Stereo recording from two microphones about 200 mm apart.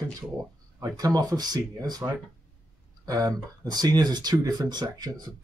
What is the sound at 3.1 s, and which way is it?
Speech, 20° right (ahead or behind).